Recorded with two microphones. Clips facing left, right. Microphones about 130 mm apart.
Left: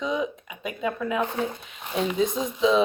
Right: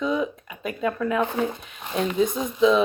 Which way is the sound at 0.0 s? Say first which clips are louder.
Right 2 dB; 20° left (ahead or behind).